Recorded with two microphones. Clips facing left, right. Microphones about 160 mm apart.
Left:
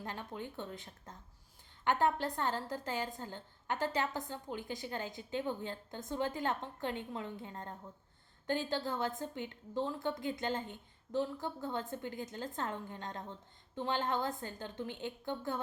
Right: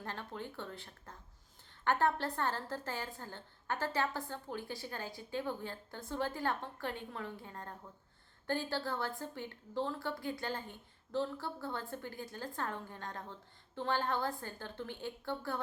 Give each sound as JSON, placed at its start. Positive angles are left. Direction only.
{"t": 0.0, "sound": "a woman's voice", "side_deg": 15}